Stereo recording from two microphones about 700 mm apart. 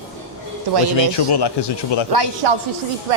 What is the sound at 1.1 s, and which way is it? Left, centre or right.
Speech, left.